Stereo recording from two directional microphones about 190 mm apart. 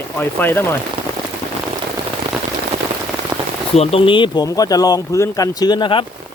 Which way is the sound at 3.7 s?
30° left (ahead or behind).